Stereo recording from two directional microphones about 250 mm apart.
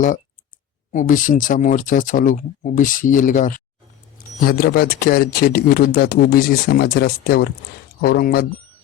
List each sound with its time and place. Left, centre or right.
0.9 s speech: left